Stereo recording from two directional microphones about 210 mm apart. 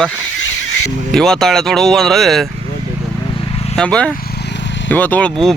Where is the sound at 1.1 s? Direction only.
Centre (ahead or behind).